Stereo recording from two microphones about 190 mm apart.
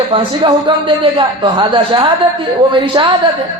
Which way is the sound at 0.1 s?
25° right (ahead or behind).